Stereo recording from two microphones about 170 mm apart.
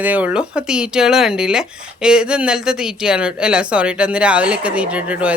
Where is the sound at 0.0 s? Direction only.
10° right (ahead or behind).